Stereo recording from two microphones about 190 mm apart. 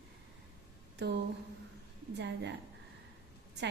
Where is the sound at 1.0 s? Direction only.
65° right (ahead or behind).